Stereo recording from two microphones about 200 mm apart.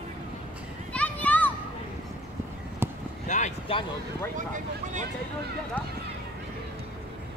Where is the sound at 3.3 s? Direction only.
35° left (ahead or behind).